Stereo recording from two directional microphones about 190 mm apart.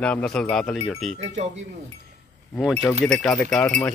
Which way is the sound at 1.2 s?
35° right (ahead or behind).